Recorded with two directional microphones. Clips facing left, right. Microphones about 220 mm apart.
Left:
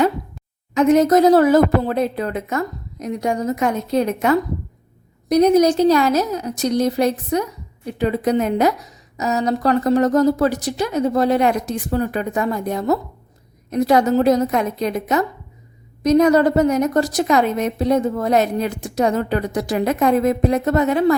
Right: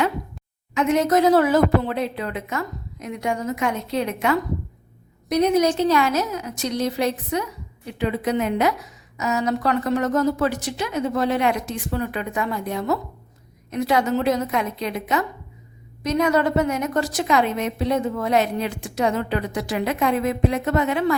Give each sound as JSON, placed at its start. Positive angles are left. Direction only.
{"t": 0.7, "sound": "a woman's voice", "side_deg": 40}